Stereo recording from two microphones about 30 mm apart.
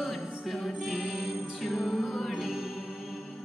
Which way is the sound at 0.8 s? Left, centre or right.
Centre.